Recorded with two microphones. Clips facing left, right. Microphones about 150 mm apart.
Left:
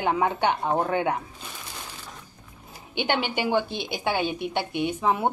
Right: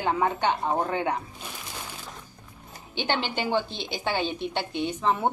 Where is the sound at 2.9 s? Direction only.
10° left (ahead or behind).